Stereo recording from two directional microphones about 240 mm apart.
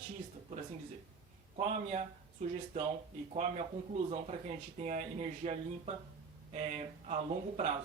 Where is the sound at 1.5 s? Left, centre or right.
Right.